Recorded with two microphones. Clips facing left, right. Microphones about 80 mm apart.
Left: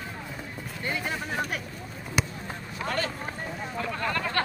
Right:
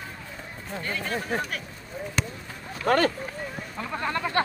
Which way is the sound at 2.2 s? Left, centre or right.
Centre.